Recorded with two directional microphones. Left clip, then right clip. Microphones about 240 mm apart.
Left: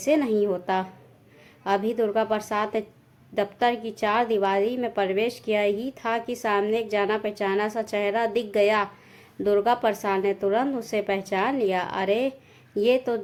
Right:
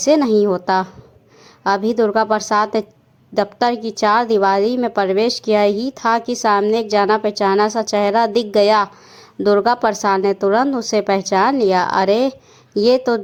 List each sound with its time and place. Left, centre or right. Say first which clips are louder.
0.0 s a woman's voice: right 9 dB; right